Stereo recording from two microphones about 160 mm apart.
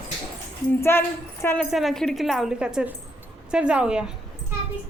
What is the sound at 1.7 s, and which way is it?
A woman's voice, centre (ahead or behind).